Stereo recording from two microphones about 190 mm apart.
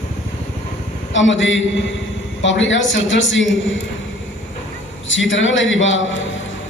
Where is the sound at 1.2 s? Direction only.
75° left (ahead or behind).